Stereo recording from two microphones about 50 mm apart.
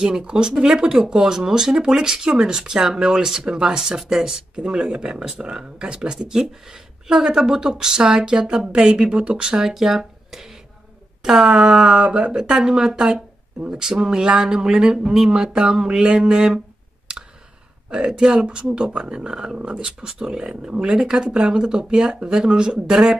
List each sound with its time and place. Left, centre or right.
0.0 s speech: centre
9.6 s speech: centre
17.8 s speech: centre